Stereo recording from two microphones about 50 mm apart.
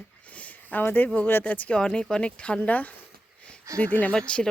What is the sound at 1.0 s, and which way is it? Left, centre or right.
Speech, left.